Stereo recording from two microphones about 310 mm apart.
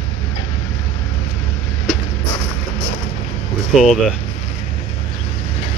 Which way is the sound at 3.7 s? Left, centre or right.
Centre.